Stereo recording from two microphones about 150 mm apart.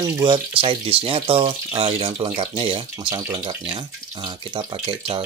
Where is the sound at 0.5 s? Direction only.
40° right (ahead or behind).